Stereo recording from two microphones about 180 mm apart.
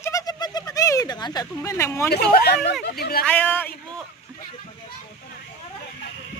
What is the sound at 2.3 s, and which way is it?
Speech, 60° left (ahead or behind).